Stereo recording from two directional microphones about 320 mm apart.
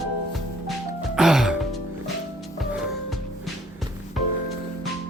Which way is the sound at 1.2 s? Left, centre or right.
Centre.